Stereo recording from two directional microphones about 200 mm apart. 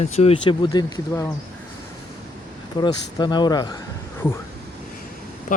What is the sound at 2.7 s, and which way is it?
Speech, 20° left (ahead or behind).